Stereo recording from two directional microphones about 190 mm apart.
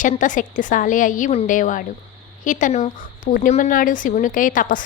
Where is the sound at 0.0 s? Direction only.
40° left (ahead or behind).